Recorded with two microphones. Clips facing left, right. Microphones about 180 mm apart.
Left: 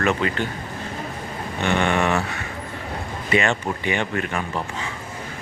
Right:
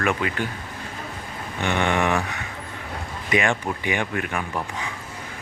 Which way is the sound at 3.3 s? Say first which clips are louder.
Left 1 dB; 15° right (ahead or behind).